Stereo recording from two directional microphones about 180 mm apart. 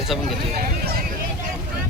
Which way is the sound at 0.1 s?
Centre (ahead or behind).